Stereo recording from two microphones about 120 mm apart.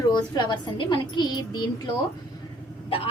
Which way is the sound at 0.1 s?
35° left (ahead or behind).